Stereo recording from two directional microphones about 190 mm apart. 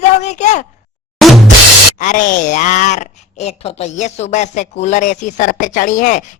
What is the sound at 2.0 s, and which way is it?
Speech, 40° left (ahead or behind).